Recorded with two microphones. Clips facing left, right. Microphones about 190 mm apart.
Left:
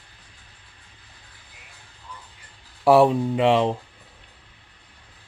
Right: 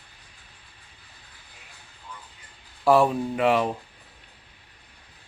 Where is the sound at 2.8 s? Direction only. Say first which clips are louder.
Left 4 dB; 25° left (ahead or behind).